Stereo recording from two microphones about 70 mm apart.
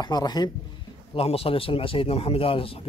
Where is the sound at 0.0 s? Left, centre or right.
Left.